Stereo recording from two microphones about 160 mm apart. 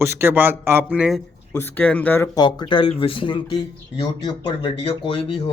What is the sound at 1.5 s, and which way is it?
Speech, 10° left (ahead or behind).